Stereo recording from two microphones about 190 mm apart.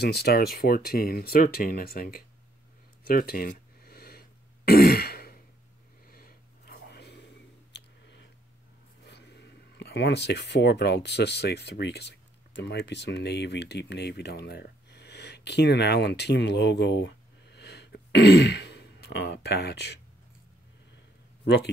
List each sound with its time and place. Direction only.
0.0 s speech: 55° left (ahead or behind)
3.1 s throat clearing: 50° left (ahead or behind)
6.0 s a sound: 50° left (ahead or behind); by 8.3 s 65° left (ahead or behind)
9.0 s speech: 65° left (ahead or behind)